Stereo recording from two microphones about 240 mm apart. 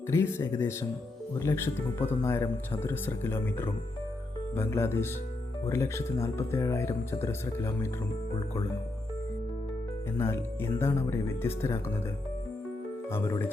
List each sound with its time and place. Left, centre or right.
0.1 s speech: centre
10.2 s speech: centre
13.1 s speech: centre